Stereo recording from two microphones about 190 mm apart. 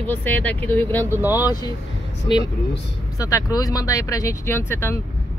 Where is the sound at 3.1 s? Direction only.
20° left (ahead or behind).